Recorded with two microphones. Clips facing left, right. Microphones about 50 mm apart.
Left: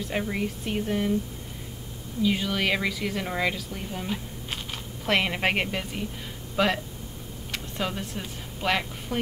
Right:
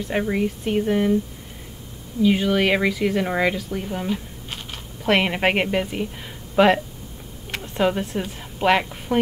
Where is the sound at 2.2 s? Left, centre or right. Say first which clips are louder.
Right 7 dB; right.